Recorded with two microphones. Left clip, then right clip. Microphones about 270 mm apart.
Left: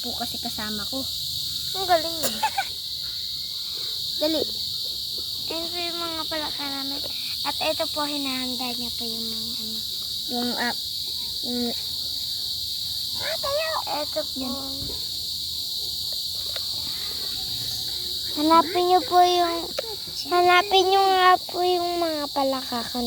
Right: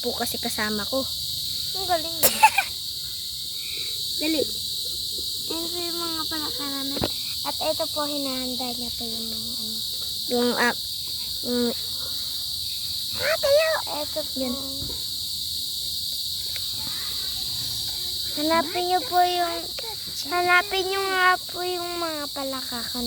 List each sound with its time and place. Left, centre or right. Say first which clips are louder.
2.2 s cricket: right 7 dB; right
4.2 s speech: left 1 dB; centre
7.6 s child singing: even; centre
10.3 s cricket: right 5 dB; right
13.2 s cricket: right 8 dB; right
18.3 s child singing: left 5 dB; centre